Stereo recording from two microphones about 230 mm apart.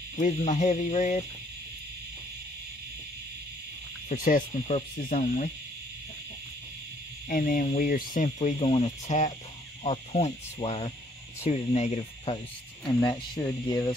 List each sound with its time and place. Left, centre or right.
0.2 s speech: left
4.1 s speech: left
7.2 s speech: left; by 13.9 s centre